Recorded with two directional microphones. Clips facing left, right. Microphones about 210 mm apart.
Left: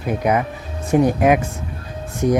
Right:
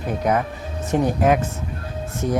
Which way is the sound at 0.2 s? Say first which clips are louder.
Left 1 dB; 10° left (ahead or behind).